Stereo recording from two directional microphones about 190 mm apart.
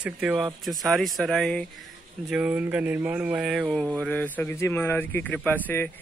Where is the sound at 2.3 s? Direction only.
10° right (ahead or behind).